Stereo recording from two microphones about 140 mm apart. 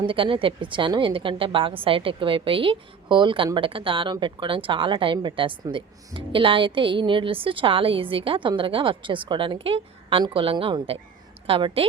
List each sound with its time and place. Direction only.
0.0 s a woman's voice: 40° right (ahead or behind)